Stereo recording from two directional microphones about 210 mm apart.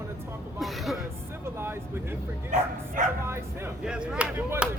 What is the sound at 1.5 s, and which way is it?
Speech, 10° right (ahead or behind).